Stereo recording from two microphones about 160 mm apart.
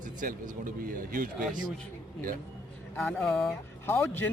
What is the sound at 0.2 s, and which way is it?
A man's voice, 55° right (ahead or behind).